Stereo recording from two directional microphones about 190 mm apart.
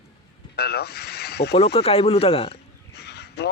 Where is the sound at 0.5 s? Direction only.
55° left (ahead or behind).